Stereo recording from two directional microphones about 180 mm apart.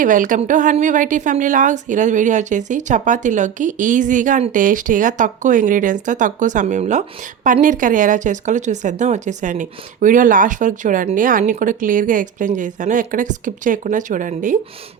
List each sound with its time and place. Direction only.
0.0 s speech: 45° right (ahead or behind)